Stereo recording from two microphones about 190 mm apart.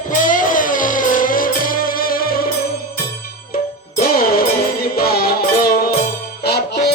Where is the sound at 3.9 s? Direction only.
50° left (ahead or behind).